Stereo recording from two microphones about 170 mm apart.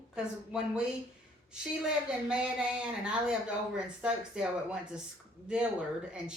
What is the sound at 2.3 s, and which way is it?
Speech, 5° right (ahead or behind).